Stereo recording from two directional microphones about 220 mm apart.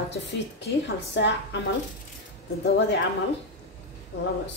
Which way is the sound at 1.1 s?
50° left (ahead or behind).